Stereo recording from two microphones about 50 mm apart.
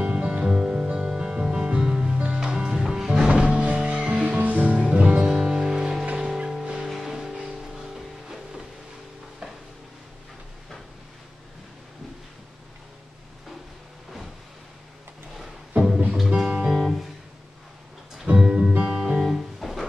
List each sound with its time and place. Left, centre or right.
0.0 s music: right
0.5 s music: centre
16.3 s music: centre
16.7 s music: centre
18.2 s music: centre